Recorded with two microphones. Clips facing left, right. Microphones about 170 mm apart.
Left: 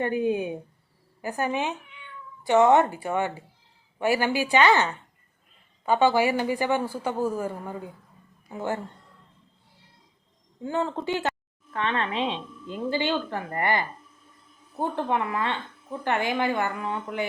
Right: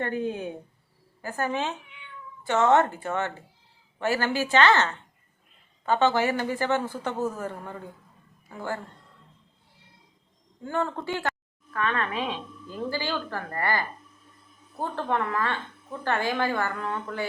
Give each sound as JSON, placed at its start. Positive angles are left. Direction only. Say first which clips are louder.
{"t": 0.0, "sound": "a woman's voice", "louder": "left 4 dB", "side_deg": 10}
{"t": 8.4, "sound": "a woman's voice", "louder": "left 3 dB", "side_deg": 20}
{"t": 10.6, "sound": "a woman's voice", "louder": "left 1 dB", "side_deg": 20}
{"t": 15.0, "sound": "a woman's voice", "louder": "right 2 dB", "side_deg": 15}